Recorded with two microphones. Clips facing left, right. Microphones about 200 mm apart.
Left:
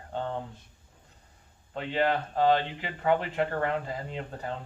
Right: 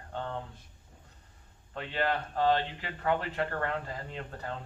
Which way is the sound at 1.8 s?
15° left (ahead or behind).